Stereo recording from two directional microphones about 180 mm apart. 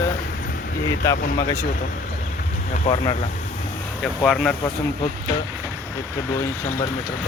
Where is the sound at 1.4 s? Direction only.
20° left (ahead or behind).